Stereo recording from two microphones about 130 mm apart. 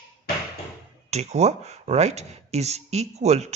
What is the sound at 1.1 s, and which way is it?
Speech, 55° right (ahead or behind).